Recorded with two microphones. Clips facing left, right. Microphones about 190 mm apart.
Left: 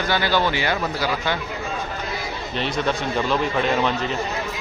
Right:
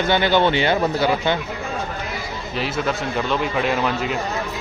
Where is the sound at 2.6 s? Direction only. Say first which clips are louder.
Even; 5° right (ahead or behind).